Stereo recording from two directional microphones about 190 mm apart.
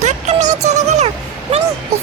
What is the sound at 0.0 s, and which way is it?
Music, 40° right (ahead or behind).